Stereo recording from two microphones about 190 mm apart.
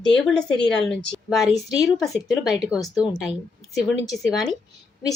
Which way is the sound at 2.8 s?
5° right (ahead or behind).